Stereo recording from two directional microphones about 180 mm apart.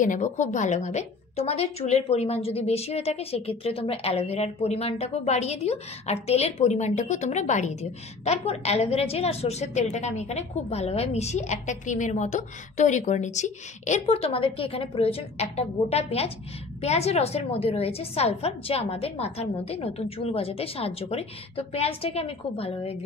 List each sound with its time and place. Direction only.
0.0 s a woman's voice: 45° left (ahead or behind)